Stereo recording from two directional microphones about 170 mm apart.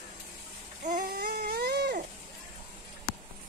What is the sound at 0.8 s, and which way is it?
Baby cry, 55° right (ahead or behind).